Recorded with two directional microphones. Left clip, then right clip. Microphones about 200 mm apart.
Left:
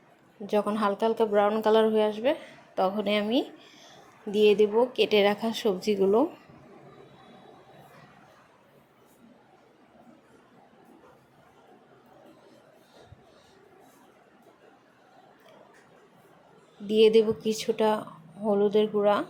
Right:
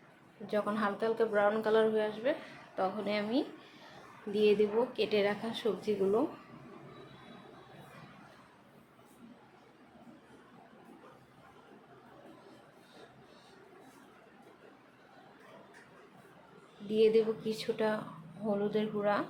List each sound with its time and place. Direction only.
0.4 s speech: 30° left (ahead or behind)
16.9 s speech: 35° left (ahead or behind)